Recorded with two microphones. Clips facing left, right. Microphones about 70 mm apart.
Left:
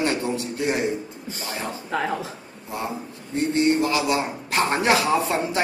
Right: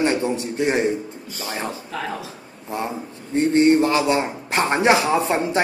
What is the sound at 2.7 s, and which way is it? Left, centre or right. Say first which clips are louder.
A man's voice: right 3 dB; right.